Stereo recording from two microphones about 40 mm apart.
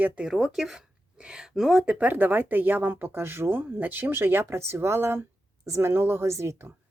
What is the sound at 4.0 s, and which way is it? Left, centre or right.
Speech, right.